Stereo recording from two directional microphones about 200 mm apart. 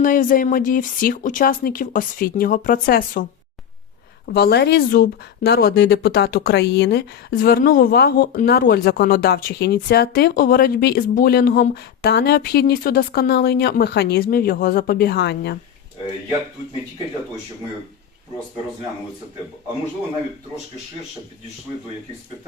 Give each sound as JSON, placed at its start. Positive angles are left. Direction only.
{"t": 0.0, "sound": "speech", "side_deg": 40}
{"t": 4.3, "sound": "speech", "side_deg": 50}